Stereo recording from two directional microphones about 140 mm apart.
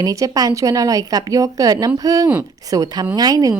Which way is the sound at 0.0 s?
25° right (ahead or behind).